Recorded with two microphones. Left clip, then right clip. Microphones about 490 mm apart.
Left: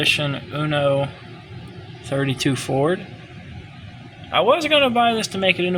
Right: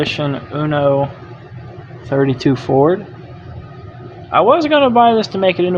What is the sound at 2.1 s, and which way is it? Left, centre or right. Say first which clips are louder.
Speech: right 7 dB; left.